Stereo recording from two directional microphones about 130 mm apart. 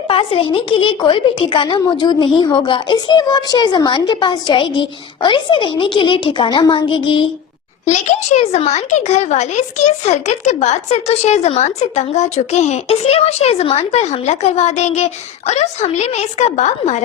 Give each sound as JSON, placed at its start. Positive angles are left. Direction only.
{"t": 0.1, "sound": "a woman's voice", "side_deg": 45}
{"t": 7.9, "sound": "speech", "side_deg": 60}